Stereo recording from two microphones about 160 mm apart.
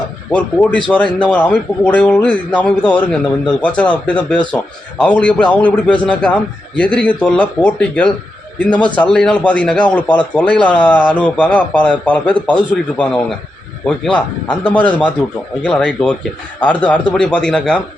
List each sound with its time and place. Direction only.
0.3 s speech: 10° left (ahead or behind)